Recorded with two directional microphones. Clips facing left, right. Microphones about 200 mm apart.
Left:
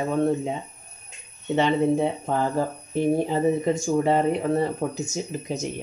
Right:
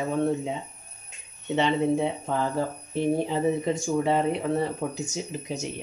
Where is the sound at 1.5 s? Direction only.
45° left (ahead or behind).